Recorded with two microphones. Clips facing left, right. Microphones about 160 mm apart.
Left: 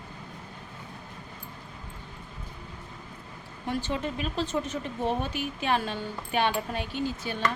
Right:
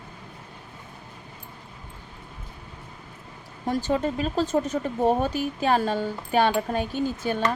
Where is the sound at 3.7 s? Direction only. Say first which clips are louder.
Right 6 dB; 40° right (ahead or behind).